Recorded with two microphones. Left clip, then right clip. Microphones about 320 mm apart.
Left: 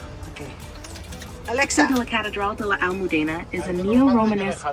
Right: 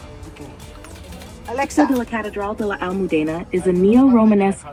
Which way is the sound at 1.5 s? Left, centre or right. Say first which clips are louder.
Right 1 dB; centre.